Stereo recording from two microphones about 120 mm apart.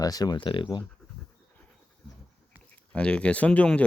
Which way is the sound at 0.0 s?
30° left (ahead or behind).